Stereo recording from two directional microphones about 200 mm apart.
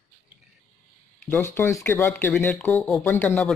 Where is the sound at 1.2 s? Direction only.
10° left (ahead or behind).